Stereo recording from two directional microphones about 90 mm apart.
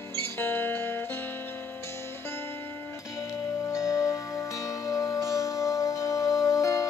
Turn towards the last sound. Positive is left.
turn(degrees=35)  # may be behind; listen again after turning